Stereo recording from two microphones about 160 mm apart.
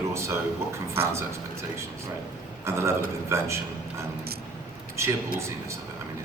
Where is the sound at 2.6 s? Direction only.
15° right (ahead or behind).